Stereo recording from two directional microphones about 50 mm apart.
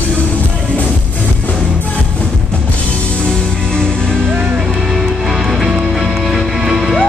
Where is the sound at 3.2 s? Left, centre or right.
Centre.